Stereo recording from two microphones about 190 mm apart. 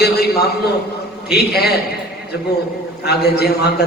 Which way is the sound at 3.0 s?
55° left (ahead or behind).